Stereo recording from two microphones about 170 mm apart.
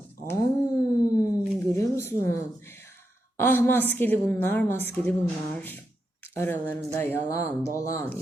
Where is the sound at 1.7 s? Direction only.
15° left (ahead or behind).